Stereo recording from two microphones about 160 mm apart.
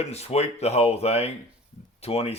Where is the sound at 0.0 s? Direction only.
40° left (ahead or behind).